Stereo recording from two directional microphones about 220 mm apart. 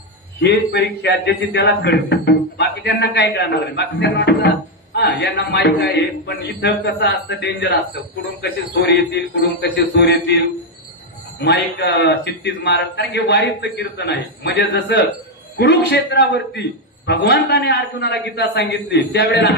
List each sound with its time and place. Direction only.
0.4 s a man's voice: 50° left (ahead or behind)